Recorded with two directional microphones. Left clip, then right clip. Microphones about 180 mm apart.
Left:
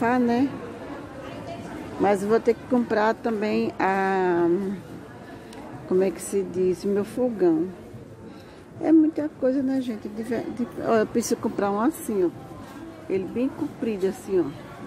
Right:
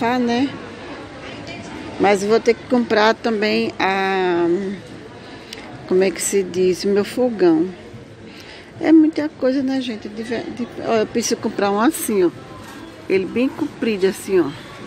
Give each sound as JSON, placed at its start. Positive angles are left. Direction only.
{"t": 0.0, "sound": "a woman's voice", "side_deg": 15}
{"t": 2.0, "sound": "a woman's voice", "side_deg": 15}
{"t": 5.9, "sound": "speech", "side_deg": 10}
{"t": 8.8, "sound": "a woman's voice", "side_deg": 5}
{"t": 11.4, "sound": "speech", "side_deg": 10}